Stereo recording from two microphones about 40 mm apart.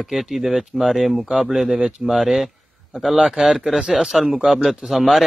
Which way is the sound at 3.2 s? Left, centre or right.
Centre.